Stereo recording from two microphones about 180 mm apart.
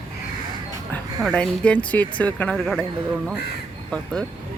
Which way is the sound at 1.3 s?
5° left (ahead or behind).